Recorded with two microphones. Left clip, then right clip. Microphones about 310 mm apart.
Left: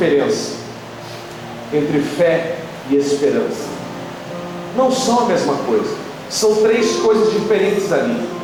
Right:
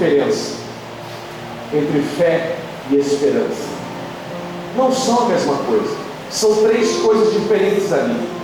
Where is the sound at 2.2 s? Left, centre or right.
Centre.